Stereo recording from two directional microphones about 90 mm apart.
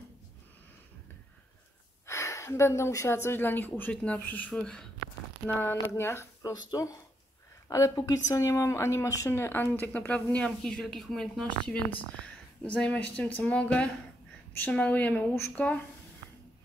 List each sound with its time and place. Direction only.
2.0 s speech: 35° left (ahead or behind); by 4.5 s 20° left (ahead or behind)
4.5 s a woman's voice: 10° left (ahead or behind)
5.5 s speech: 25° left (ahead or behind)
6.5 s a woman's voice: 40° left (ahead or behind); by 15.8 s 15° left (ahead or behind)